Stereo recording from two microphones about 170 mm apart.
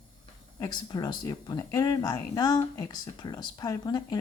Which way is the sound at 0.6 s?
25° left (ahead or behind).